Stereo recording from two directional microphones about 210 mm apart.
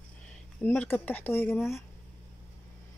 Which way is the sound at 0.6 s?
10° left (ahead or behind).